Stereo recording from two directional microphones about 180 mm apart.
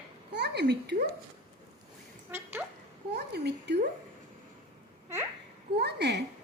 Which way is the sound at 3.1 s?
65° right (ahead or behind).